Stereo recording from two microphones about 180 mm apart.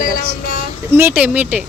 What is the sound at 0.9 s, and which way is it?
Speech, 10° right (ahead or behind).